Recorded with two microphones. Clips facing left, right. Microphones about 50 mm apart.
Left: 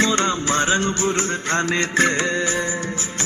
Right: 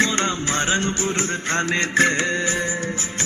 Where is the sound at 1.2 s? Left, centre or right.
Centre.